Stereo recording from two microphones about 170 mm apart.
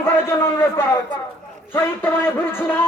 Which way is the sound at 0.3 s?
15° left (ahead or behind).